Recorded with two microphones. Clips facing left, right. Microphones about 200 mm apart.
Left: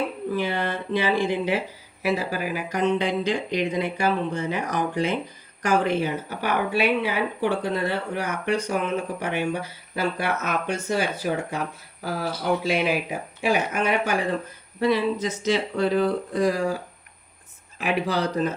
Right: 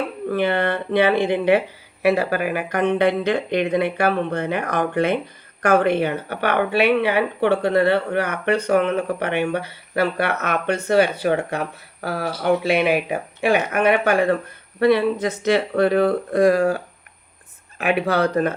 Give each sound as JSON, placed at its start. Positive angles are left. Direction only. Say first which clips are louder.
{"t": 0.3, "sound": "speech", "louder": "right 8 dB", "side_deg": -60}